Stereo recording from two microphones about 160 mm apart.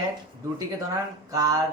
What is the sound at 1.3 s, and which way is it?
Speech, 20° right (ahead or behind).